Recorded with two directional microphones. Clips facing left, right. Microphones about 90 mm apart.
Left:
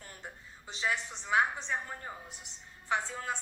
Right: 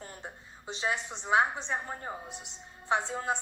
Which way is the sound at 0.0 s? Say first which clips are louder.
Right 3 dB; 20° right (ahead or behind).